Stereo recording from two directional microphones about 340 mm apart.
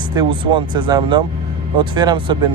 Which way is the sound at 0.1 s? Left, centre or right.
Centre.